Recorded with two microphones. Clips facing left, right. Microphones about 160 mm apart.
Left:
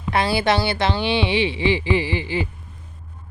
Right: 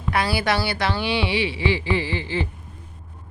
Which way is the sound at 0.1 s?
25° left (ahead or behind).